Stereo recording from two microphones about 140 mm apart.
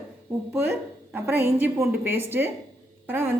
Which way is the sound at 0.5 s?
15° right (ahead or behind).